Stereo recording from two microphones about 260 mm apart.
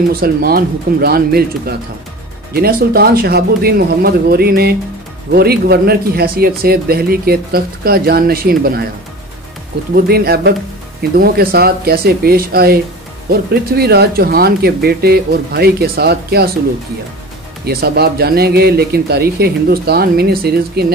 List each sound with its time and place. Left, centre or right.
0.1 s speech: right
9.9 s speech: right
17.6 s speech: right